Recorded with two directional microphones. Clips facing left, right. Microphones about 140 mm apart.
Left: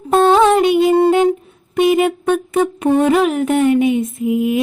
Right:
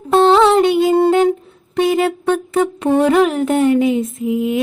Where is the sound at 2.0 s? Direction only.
15° left (ahead or behind).